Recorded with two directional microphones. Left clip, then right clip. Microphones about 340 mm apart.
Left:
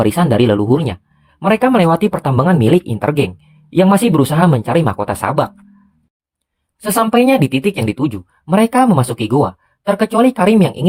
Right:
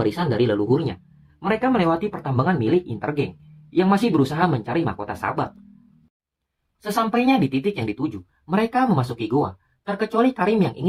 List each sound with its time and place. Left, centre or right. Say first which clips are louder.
0.0 s speech: left 8 dB; left
7.1 s speech: left 9 dB; left